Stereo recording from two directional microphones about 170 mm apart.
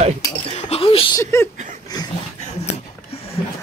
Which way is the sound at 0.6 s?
35° left (ahead or behind).